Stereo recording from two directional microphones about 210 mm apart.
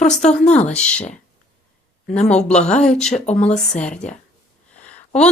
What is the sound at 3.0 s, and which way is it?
Speech, 30° left (ahead or behind).